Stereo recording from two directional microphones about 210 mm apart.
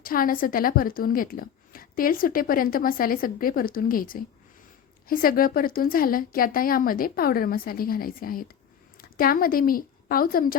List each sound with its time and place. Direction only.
0.0 s a woman's voice: 45° left (ahead or behind)